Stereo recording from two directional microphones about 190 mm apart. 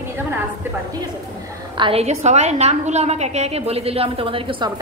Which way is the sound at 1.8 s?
30° right (ahead or behind).